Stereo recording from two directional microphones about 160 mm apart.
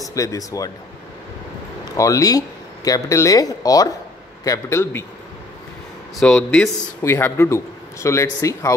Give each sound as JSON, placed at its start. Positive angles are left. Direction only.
{"t": 0.0, "sound": "speech", "side_deg": 20}
{"t": 2.0, "sound": "a man's voice", "side_deg": 20}
{"t": 6.1, "sound": "a man's voice", "side_deg": 5}
{"t": 7.0, "sound": "a man's voice", "side_deg": 15}